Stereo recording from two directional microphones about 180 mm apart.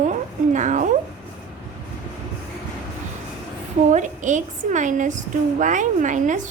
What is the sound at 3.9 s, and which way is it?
A woman's voice, 45° right (ahead or behind).